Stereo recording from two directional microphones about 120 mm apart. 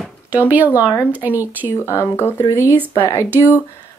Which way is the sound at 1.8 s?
20° left (ahead or behind).